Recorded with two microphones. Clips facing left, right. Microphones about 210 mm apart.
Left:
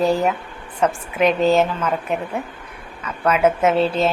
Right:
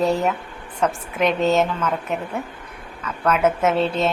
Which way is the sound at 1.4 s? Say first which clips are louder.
Left 2 dB; 30° left (ahead or behind).